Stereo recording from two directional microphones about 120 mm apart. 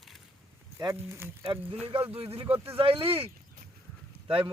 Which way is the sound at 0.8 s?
25° right (ahead or behind).